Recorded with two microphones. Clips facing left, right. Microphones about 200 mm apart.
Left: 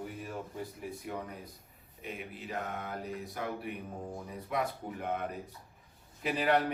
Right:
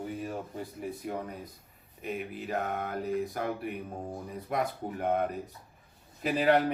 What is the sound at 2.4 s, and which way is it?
A man's voice, 55° right (ahead or behind).